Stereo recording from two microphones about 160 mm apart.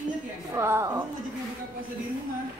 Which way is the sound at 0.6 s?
15° right (ahead or behind).